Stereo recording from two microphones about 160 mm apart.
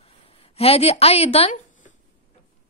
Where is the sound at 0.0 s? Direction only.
40° left (ahead or behind).